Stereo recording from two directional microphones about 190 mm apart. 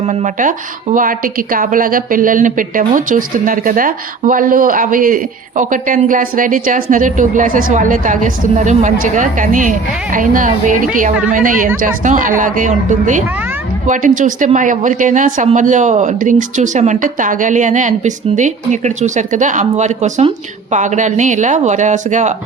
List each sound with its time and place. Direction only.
0.0 s a woman's voice: 35° right (ahead or behind)